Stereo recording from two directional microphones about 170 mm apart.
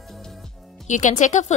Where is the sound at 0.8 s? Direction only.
45° left (ahead or behind).